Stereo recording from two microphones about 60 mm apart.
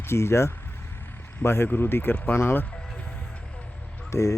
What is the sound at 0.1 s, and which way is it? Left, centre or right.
Speech, left.